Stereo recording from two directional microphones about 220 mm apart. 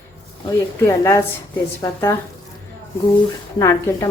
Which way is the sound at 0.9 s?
10° left (ahead or behind).